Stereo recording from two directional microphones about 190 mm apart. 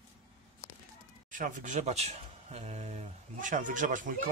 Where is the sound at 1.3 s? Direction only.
45° right (ahead or behind).